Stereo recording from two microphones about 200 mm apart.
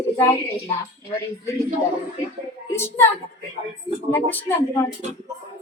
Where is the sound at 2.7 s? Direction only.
10° left (ahead or behind).